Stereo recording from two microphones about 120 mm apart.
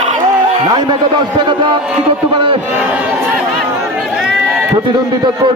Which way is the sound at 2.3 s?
45° right (ahead or behind).